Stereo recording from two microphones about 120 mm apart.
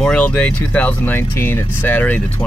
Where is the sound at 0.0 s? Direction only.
10° left (ahead or behind).